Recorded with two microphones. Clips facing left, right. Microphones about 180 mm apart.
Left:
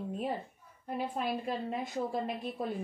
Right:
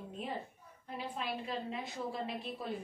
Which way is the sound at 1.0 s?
50° left (ahead or behind).